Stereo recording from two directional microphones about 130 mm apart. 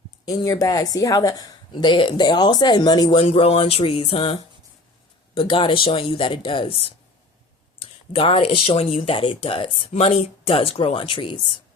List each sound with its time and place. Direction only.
0.3 s a woman's voice: 25° left (ahead or behind)